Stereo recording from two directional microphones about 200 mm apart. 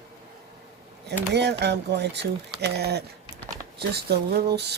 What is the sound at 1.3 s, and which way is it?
Speech, 60° right (ahead or behind).